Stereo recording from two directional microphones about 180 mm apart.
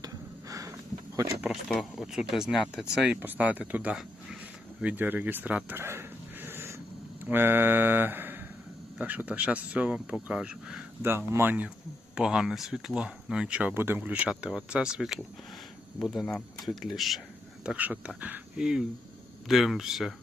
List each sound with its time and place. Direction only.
0.0 s a sound: 20° right (ahead or behind)
1.1 s speech: 15° right (ahead or behind)
1.5 s speech: 5° left (ahead or behind)